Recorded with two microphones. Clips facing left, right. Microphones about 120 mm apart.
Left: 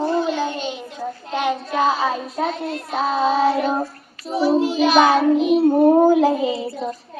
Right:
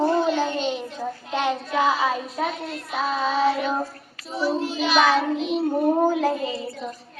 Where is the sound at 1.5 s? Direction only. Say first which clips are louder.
Left 3 dB; 20° left (ahead or behind).